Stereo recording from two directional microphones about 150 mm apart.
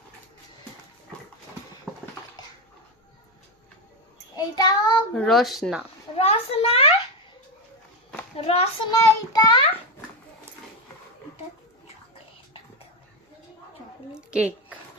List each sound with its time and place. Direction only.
4.4 s child singing: 25° left (ahead or behind)
5.1 s speech: centre (ahead or behind)
6.1 s a child's voice: 40° left (ahead or behind)
8.4 s a child's voice: 40° left (ahead or behind)
8.9 s a child's voice: 25° left (ahead or behind)
14.1 s a sound: 5° right (ahead or behind)